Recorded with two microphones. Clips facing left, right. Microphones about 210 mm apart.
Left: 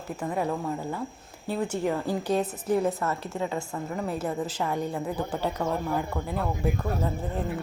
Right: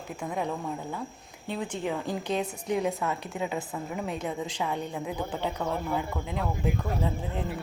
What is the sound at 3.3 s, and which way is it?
Speech, 15° right (ahead or behind).